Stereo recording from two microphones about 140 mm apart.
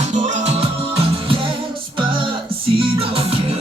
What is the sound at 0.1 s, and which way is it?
Music, 60° right (ahead or behind).